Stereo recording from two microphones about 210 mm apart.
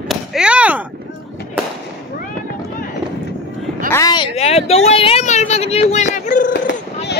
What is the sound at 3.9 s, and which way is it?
Speech, 15° left (ahead or behind).